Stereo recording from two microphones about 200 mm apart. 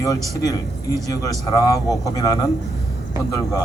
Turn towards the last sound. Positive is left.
turn(degrees=15)  # may be behind; listen again after turning